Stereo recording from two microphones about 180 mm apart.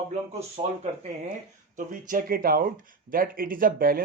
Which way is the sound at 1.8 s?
45° right (ahead or behind).